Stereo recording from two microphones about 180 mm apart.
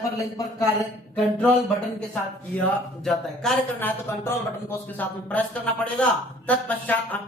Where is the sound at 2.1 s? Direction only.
5° left (ahead or behind).